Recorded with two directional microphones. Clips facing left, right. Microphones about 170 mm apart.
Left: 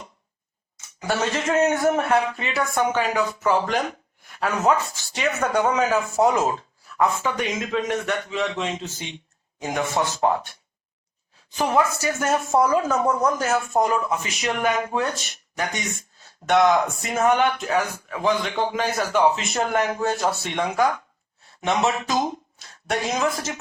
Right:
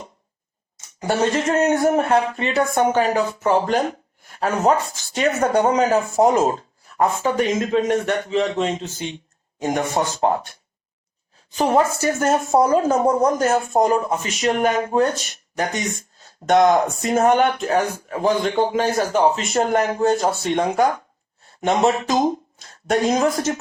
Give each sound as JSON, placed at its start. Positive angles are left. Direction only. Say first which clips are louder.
{"t": 0.9, "sound": "speech", "louder": "right 5 dB", "side_deg": -35}
{"t": 11.6, "sound": "speech", "louder": "right 4 dB", "side_deg": -35}